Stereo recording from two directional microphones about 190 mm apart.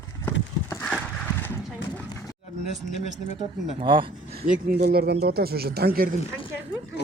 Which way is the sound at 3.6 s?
30° right (ahead or behind).